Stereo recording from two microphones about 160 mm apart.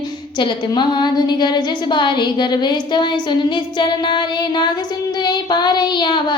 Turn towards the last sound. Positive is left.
turn(degrees=30)  # may be behind; listen again after turning